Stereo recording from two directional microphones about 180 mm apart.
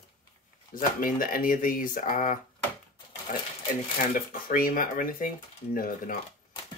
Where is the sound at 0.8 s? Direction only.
50° left (ahead or behind).